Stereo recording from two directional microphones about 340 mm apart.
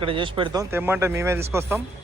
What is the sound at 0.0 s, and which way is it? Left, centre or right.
A man's voice, centre.